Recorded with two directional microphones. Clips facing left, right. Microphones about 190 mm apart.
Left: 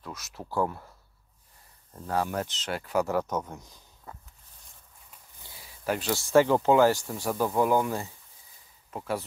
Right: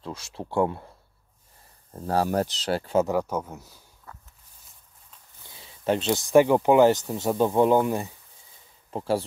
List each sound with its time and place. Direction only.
0.0 s speech: 30° right (ahead or behind)
2.0 s speech: 35° right (ahead or behind)
3.1 s speech: 10° right (ahead or behind)
4.1 s walk: 20° left (ahead or behind)
5.4 s speech: 25° right (ahead or behind)
8.9 s speech: 30° right (ahead or behind)